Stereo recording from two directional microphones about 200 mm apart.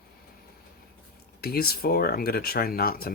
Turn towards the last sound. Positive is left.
turn(degrees=50)  # may be behind; listen again after turning